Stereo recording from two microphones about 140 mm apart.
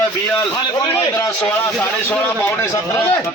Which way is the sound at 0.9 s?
25° left (ahead or behind).